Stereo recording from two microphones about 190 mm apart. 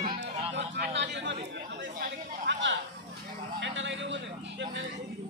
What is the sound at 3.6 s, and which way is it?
Vehicle, 75° right (ahead or behind).